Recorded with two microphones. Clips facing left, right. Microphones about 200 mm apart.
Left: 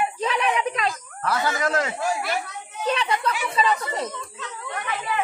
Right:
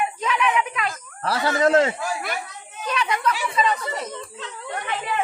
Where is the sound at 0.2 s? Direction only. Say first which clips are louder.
Right 2 dB; 35° left (ahead or behind).